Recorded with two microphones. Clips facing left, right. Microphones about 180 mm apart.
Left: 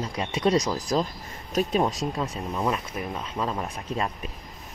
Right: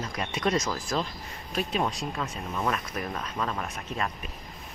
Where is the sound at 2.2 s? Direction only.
15° left (ahead or behind).